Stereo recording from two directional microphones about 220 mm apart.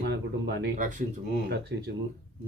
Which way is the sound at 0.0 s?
50° right (ahead or behind).